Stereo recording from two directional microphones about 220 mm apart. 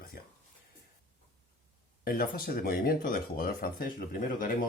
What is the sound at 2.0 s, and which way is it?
Speech, 40° left (ahead or behind).